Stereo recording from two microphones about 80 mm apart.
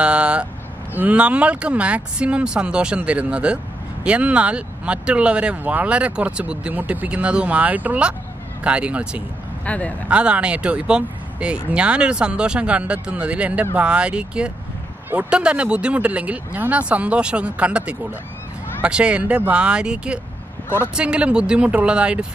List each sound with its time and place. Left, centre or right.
0.0 s vehicle: centre
0.9 s speech: centre
9.7 s speech: centre
10.0 s speech: centre